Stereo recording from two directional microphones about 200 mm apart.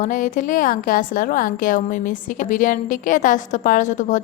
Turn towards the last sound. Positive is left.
turn(degrees=40)  # may be behind; listen again after turning